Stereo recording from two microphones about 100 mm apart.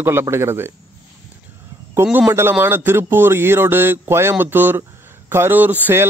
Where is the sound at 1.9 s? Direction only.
20° right (ahead or behind).